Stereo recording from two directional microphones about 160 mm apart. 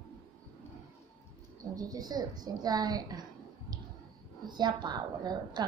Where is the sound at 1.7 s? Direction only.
25° right (ahead or behind).